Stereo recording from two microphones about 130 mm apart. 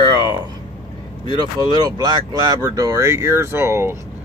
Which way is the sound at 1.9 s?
30° right (ahead or behind).